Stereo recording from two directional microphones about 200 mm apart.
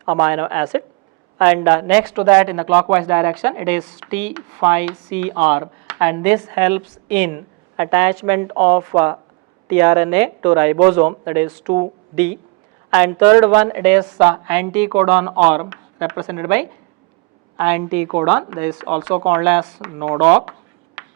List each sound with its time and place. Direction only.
0.0 s speech: 10° right (ahead or behind)
11.4 s speech: 25° right (ahead or behind)
13.3 s speech: 10° right (ahead or behind)